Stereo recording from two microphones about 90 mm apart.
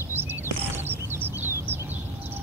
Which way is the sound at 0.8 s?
25° right (ahead or behind).